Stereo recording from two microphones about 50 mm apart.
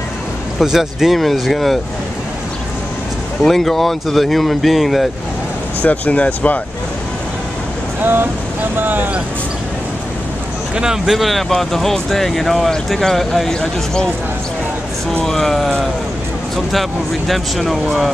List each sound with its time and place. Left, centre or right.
0.6 s speech: centre
3.4 s speech: centre
5.8 s speech: left
8.0 s speech: right
10.8 s speech: centre
11.1 s speech: centre
13.5 s speech: centre
15.2 s speech: centre
17.3 s speech: centre